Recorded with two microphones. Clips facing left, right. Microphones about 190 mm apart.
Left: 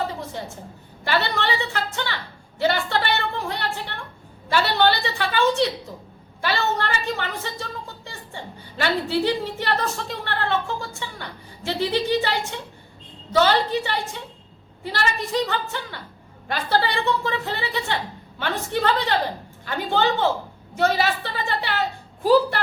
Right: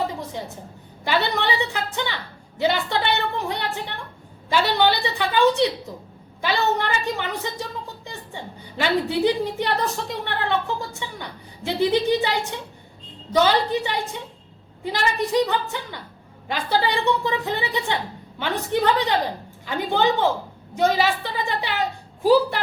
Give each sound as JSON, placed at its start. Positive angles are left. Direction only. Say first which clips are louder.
{"t": 1.0, "sound": "a woman's voice", "louder": "right 1 dB", "side_deg": -15}